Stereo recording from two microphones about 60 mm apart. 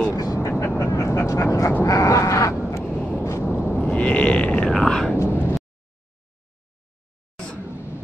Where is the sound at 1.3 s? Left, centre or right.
Left.